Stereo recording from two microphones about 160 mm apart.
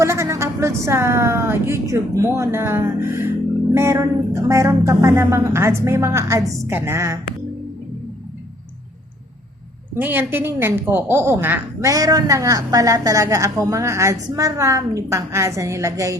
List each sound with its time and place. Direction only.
0.0 s a woman's voice: 15° right (ahead or behind)
9.9 s a woman's voice: 15° right (ahead or behind)